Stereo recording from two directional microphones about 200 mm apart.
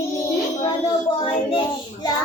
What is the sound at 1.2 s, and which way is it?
Child singing, 25° left (ahead or behind).